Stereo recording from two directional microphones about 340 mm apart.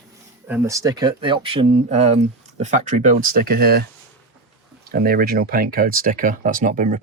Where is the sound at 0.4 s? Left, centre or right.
Centre; by 3.8 s right.